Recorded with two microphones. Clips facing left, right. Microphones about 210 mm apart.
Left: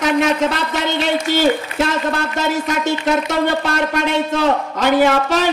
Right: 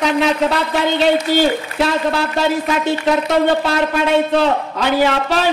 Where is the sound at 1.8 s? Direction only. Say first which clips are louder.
Right 2 dB; 45° left (ahead or behind).